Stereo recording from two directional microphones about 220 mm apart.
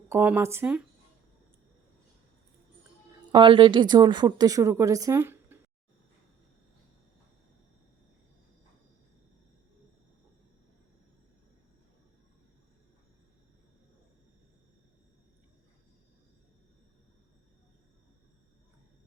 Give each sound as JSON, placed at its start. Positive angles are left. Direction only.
{"t": 0.1, "sound": "speech", "side_deg": -10}
{"t": 3.3, "sound": "speech", "side_deg": -20}